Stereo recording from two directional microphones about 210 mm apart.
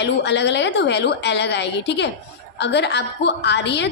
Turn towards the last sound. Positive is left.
turn(degrees=55)  # may be behind; listen again after turning